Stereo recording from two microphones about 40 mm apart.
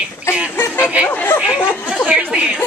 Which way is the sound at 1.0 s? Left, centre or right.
Left.